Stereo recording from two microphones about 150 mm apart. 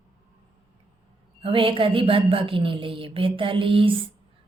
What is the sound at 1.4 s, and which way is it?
A woman's voice, 35° right (ahead or behind).